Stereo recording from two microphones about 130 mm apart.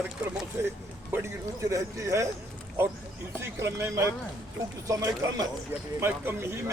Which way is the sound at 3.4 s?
20° right (ahead or behind).